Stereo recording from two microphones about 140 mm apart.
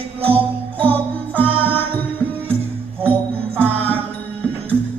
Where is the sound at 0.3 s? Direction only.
40° right (ahead or behind).